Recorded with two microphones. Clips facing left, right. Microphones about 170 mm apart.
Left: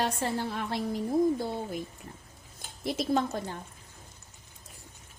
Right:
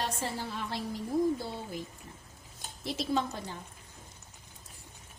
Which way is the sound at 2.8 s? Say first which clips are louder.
Left 3 dB; 50° left (ahead or behind).